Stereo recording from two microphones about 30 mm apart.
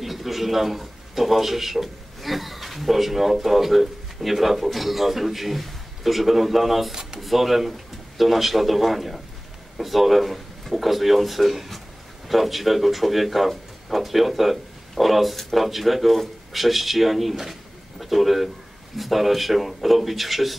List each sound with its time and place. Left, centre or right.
0.0 s a man's voice: centre
6.9 s a sound: centre
7.2 s speech: centre